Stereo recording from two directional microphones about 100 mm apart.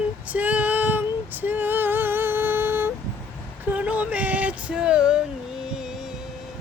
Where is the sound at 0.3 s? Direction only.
15° right (ahead or behind).